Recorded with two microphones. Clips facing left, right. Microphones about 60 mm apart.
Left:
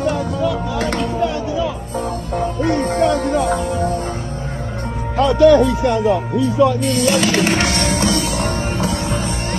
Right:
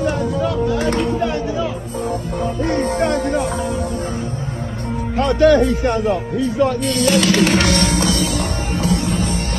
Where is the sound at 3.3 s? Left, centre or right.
Left.